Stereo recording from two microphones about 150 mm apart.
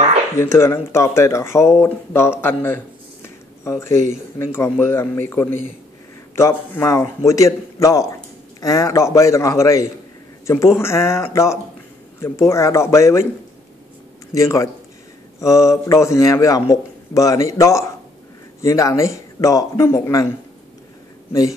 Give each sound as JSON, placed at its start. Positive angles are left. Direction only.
{"t": 0.4, "sound": "a man's voice", "side_deg": 20}
{"t": 14.3, "sound": "a man's voice", "side_deg": 20}
{"t": 21.3, "sound": "speech", "side_deg": 25}